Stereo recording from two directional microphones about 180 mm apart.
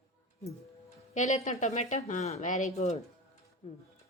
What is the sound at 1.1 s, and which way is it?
A woman's voice, 40° left (ahead or behind).